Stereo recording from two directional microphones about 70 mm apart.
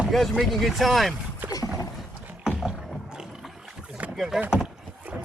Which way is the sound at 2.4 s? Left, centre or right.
Centre.